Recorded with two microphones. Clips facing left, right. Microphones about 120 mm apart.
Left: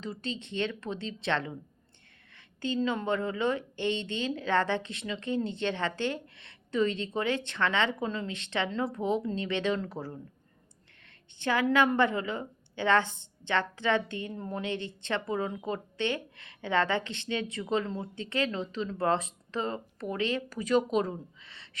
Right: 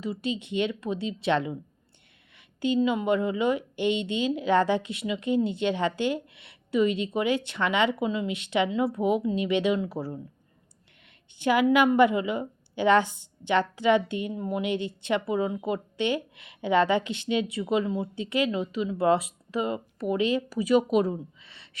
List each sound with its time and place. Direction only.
0.0 s a woman's voice: 10° right (ahead or behind)
2.6 s a woman's voice: 15° right (ahead or behind)
11.4 s a woman's voice: 15° right (ahead or behind)
21.4 s a sound: 20° right (ahead or behind)